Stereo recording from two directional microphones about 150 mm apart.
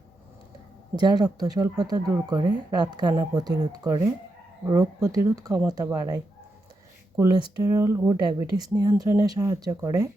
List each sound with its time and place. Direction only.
0.9 s speech: 30° right (ahead or behind)